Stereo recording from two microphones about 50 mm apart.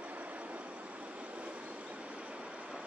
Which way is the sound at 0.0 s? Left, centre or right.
Right.